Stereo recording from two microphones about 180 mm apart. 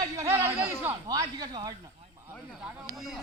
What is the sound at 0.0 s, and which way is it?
A man's voice, 15° right (ahead or behind).